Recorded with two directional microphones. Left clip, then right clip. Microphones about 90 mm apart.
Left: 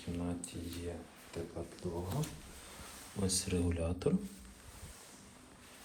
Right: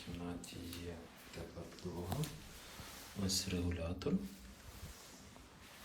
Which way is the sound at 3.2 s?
10° right (ahead or behind).